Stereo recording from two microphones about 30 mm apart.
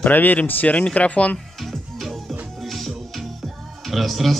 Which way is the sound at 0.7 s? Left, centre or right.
Left.